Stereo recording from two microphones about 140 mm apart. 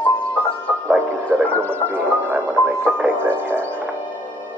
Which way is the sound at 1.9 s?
15° right (ahead or behind).